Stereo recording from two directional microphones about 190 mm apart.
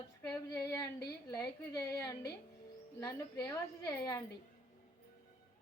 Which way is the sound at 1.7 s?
20° left (ahead or behind).